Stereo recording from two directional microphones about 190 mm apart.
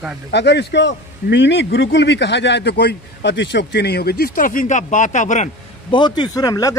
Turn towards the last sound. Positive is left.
turn(degrees=20)  # may be behind; listen again after turning